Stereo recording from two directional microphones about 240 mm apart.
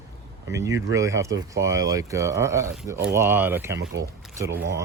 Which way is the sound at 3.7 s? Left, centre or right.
Right.